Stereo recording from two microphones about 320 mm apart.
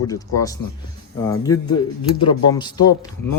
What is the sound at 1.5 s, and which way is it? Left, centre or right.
Speech, left.